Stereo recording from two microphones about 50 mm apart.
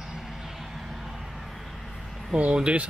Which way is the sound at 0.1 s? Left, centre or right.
Centre.